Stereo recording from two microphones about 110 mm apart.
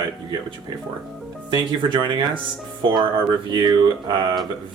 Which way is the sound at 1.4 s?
45° right (ahead or behind).